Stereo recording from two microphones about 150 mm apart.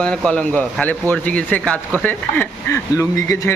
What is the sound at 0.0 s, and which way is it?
Speech, 5° left (ahead or behind).